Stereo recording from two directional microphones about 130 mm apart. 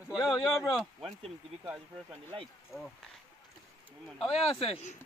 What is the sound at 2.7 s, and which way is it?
Speech, 20° left (ahead or behind).